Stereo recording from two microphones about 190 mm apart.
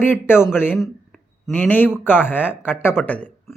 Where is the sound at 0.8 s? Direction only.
5° left (ahead or behind).